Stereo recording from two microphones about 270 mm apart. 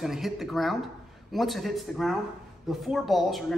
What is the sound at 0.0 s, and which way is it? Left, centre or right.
Speech, centre.